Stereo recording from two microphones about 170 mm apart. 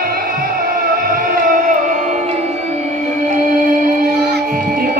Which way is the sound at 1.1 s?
50° right (ahead or behind).